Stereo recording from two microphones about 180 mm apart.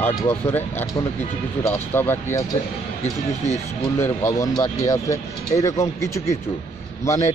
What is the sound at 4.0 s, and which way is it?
Speech, 15° left (ahead or behind).